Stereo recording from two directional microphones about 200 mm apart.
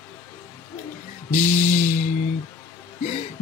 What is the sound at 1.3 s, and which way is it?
Mantra, 40° left (ahead or behind).